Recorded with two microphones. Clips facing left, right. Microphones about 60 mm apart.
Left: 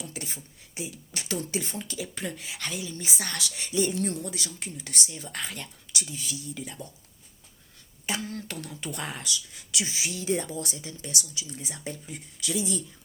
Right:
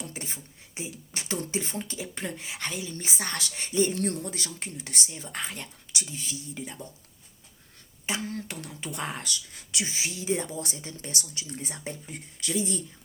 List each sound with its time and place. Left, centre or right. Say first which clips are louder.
0.0 s speech: even; right
3.9 s speech: even; right
8.0 s speech: even; right
9.2 s speech: left 1 dB; right
9.7 s speech: even; right
10.2 s speech: left 1 dB; centre
10.5 s speech: left 1 dB; right